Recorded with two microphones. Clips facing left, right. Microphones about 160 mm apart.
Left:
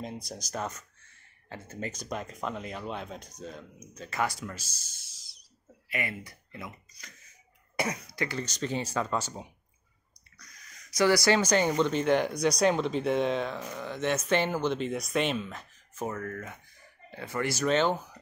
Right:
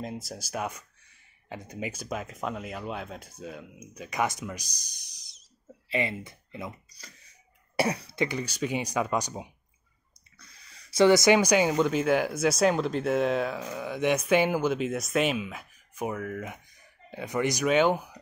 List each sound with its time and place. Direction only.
0.0 s speech: centre (ahead or behind)
10.4 s speech: 30° right (ahead or behind); by 18.2 s 10° right (ahead or behind)